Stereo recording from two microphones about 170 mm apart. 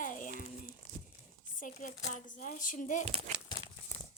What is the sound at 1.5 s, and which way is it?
Speech, 50° left (ahead or behind).